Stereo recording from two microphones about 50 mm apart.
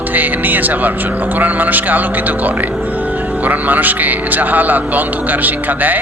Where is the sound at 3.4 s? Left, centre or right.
Right.